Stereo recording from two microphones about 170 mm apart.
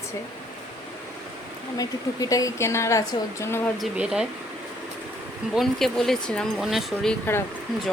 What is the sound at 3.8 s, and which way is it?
Speech, 5° right (ahead or behind).